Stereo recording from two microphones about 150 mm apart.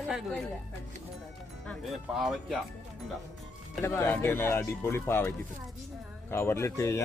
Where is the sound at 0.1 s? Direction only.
5° right (ahead or behind).